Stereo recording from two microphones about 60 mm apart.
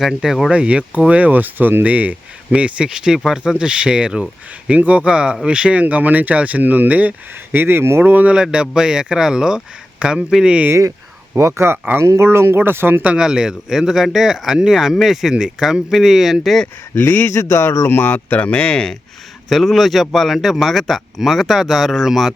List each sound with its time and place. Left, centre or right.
0.0 s speech: centre
0.5 s speech: centre
7.5 s speech: right
8.4 s speech: centre
11.3 s speech: right
13.1 s speech: centre
16.9 s speech: left
17.3 s speech: left
17.8 s speech: left; by 18.9 s centre
19.5 s speech: centre